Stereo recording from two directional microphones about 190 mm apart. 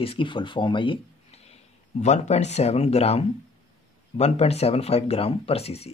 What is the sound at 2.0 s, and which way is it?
A woman's voice, 35° left (ahead or behind).